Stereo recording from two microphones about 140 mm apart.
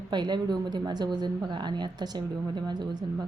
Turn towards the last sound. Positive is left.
turn(degrees=-30)  # may be behind; listen again after turning